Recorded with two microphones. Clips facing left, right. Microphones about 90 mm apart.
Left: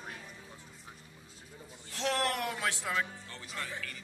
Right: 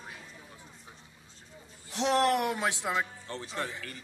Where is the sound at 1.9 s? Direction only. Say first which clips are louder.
Right 7 dB; 20° right (ahead or behind).